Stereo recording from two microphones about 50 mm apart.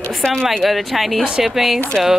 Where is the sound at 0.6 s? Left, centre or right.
Centre.